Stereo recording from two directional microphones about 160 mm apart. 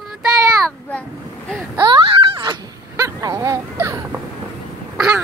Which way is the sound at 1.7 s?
30° right (ahead or behind).